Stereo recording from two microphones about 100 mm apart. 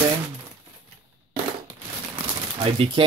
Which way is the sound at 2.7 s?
65° right (ahead or behind).